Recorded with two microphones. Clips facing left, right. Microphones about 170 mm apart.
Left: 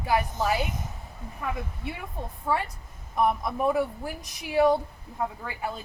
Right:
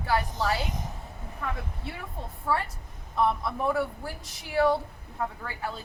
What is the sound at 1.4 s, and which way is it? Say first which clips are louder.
A woman's voice: left 2 dB; 10° left (ahead or behind).